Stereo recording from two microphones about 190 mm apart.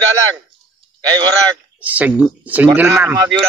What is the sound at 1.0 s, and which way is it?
Speech, 20° right (ahead or behind).